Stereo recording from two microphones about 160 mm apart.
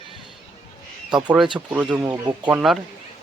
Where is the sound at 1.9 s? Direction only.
20° right (ahead or behind).